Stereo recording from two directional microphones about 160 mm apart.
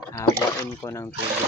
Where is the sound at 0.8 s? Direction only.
20° left (ahead or behind).